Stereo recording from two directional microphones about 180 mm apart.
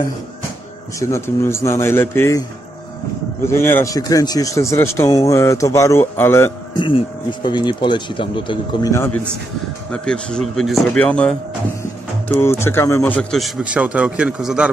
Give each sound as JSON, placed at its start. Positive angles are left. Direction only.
{"t": 0.9, "sound": "speech", "side_deg": 15}
{"t": 3.4, "sound": "speech", "side_deg": 15}
{"t": 6.7, "sound": "speech", "side_deg": 25}
{"t": 8.9, "sound": "speech", "side_deg": 10}
{"t": 12.4, "sound": "speech", "side_deg": 15}